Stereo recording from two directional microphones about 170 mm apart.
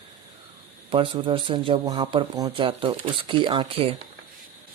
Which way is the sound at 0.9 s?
30° right (ahead or behind).